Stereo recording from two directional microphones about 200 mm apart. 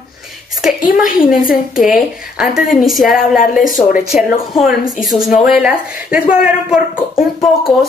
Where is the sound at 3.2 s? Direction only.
45° left (ahead or behind).